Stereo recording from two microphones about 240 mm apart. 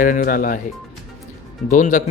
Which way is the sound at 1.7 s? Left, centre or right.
Left.